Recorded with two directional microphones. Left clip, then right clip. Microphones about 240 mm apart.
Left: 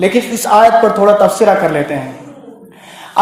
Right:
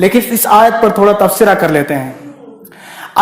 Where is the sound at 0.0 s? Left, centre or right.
Right.